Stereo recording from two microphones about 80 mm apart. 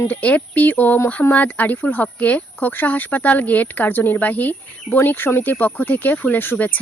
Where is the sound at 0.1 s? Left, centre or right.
Centre.